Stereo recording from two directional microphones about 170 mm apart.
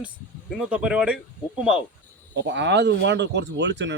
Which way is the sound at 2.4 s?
90° right.